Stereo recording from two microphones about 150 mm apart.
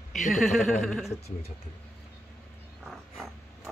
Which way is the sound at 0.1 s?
Centre (ahead or behind).